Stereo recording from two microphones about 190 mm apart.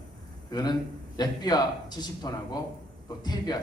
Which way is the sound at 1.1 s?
20° left (ahead or behind).